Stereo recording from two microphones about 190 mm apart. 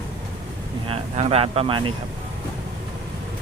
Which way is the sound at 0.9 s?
30° right (ahead or behind).